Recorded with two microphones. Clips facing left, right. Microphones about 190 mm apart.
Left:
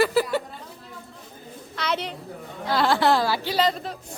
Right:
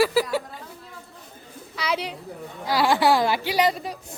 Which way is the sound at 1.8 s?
5° right (ahead or behind).